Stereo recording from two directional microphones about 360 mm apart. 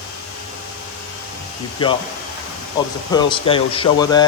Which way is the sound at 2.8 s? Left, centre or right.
Centre.